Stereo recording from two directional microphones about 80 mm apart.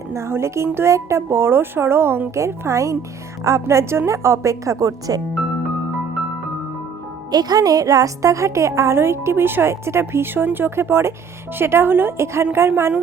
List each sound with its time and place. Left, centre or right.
0.1 s a woman's voice: right
7.3 s a woman's voice: right